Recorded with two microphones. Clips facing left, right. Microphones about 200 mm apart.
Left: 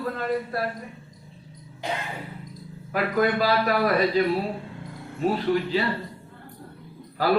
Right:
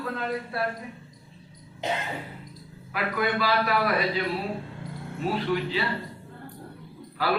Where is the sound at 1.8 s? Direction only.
20° right (ahead or behind).